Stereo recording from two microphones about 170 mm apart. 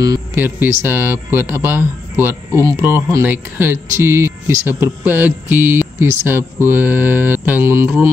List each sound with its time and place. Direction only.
0.0 s a man's voice: 15° right (ahead or behind)